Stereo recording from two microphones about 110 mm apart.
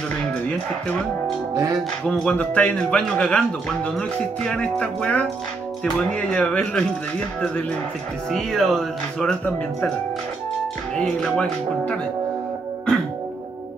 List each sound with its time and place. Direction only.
0.5 s a man's voice: 10° left (ahead or behind)
1.5 s speech: 30° right (ahead or behind)
2.0 s a man's voice: 5° left (ahead or behind)
8.3 s speech: 5° left (ahead or behind)
11.0 s a man's voice: 5° left (ahead or behind)